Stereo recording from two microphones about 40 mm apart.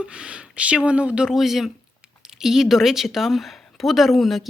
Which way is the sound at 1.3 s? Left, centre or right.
Centre.